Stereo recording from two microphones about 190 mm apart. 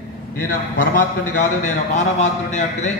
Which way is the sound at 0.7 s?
45° left (ahead or behind).